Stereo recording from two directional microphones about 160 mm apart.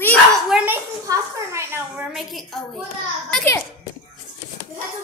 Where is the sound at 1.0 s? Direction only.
20° right (ahead or behind).